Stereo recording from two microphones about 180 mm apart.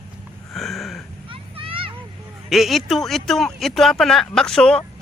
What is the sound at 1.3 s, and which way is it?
Children playing, 30° right (ahead or behind).